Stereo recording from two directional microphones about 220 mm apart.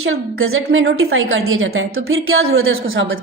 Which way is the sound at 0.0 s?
70° right (ahead or behind).